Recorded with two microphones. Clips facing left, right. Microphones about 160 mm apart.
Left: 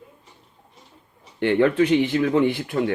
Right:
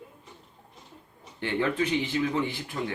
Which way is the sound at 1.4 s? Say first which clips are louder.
Left 9 dB; 60° left (ahead or behind).